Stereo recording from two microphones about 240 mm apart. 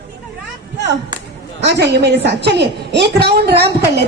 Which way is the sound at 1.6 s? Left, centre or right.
Right.